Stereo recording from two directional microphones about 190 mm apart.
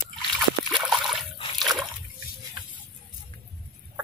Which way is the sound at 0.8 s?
Centre (ahead or behind).